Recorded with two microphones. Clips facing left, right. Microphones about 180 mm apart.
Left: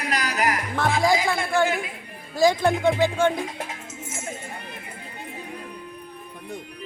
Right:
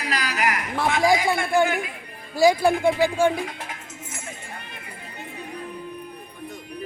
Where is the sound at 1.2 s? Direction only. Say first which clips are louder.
Right 2 dB; 15° right (ahead or behind).